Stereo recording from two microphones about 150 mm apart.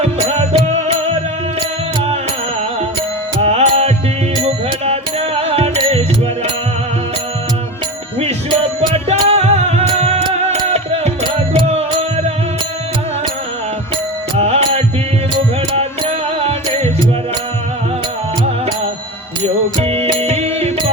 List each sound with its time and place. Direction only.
0.0 s music: 40° right (ahead or behind)
3.4 s music: 45° right (ahead or behind)
9.0 s music: 45° right (ahead or behind)
14.3 s music: 40° right (ahead or behind)
19.4 s music: 40° right (ahead or behind)